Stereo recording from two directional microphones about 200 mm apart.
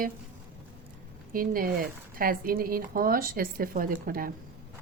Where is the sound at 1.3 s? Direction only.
45° right (ahead or behind).